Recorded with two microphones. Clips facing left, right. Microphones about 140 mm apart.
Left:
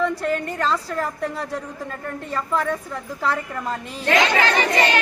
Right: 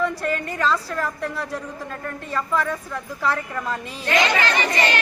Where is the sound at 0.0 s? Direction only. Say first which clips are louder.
Left 2 dB; 10° right (ahead or behind).